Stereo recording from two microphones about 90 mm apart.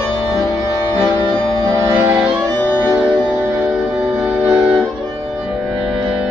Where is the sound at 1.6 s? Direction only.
35° right (ahead or behind).